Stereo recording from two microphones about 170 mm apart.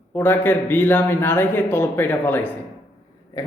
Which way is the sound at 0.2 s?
10° left (ahead or behind).